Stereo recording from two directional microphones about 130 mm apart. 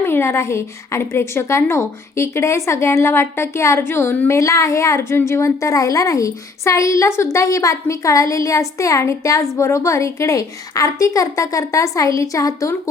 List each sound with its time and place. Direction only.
0.0 s a woman's voice: 20° left (ahead or behind)